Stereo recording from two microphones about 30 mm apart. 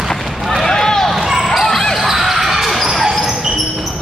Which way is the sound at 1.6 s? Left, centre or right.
Centre.